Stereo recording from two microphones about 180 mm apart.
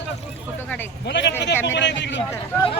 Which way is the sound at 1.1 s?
75° left (ahead or behind).